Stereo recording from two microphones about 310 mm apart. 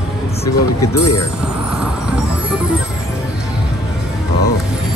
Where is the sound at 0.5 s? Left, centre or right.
Left.